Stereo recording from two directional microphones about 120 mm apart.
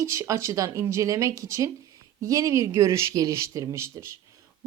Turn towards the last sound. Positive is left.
turn(degrees=-25)  # may be behind; listen again after turning